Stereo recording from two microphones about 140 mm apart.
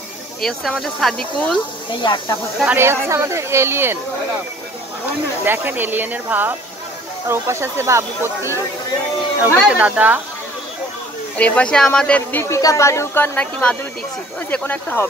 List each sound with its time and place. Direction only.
0.4 s speech: 5° left (ahead or behind)
2.0 s speech: 35° left (ahead or behind)
2.6 s speech: 15° right (ahead or behind)
5.4 s speech: 15° right (ahead or behind)
9.7 s speech: 10° right (ahead or behind)
11.3 s speech: 10° left (ahead or behind)